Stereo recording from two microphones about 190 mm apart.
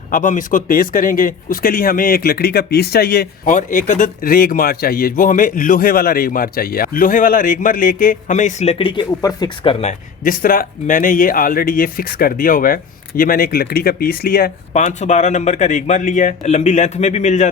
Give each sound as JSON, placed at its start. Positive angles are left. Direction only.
{"t": 0.1, "sound": "speech", "side_deg": 45}
{"t": 3.5, "sound": "speech", "side_deg": 45}
{"t": 9.8, "sound": "speech", "side_deg": 45}
{"t": 14.7, "sound": "speech", "side_deg": 40}